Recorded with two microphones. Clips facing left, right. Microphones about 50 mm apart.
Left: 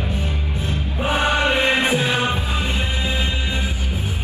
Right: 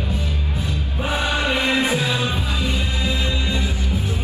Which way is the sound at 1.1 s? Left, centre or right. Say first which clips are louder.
Left 3 dB; left.